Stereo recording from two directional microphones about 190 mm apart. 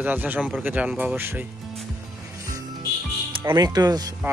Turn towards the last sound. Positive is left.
turn(degrees=-20)  # may be behind; listen again after turning